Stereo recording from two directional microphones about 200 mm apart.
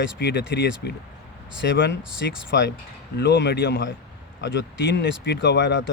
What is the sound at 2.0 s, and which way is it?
Speech, 5° right (ahead or behind).